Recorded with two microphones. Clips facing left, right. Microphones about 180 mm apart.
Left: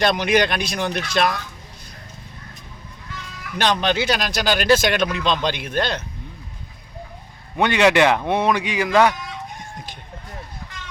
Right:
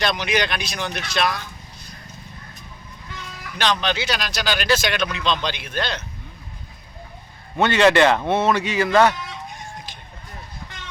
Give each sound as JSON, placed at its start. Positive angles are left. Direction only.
{"t": 0.0, "sound": "speech", "side_deg": 50}
{"t": 3.6, "sound": "speech", "side_deg": 50}
{"t": 7.5, "sound": "speech", "side_deg": 10}